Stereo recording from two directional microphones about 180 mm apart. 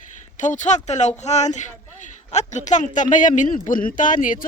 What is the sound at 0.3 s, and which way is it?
Speech, 45° left (ahead or behind).